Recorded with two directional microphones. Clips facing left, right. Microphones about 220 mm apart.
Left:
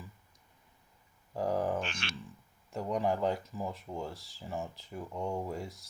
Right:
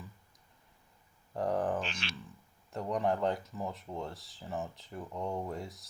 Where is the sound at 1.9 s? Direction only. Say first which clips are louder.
Even; 50° left (ahead or behind).